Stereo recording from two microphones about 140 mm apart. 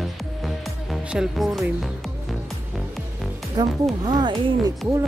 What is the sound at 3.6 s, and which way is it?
Speech, 30° right (ahead or behind).